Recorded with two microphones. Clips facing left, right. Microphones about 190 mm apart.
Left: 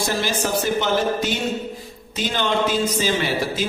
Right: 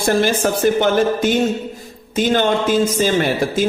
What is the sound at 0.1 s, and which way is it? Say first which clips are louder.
A man's voice: right 10 dB; 55° right (ahead or behind).